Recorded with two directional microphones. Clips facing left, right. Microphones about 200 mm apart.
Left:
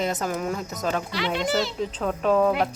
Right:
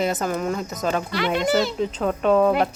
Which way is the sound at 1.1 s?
55° right (ahead or behind).